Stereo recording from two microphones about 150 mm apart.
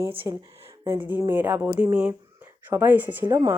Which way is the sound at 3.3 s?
20° right (ahead or behind).